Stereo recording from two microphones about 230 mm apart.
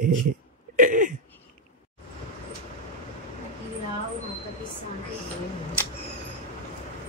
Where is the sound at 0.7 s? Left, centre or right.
Right.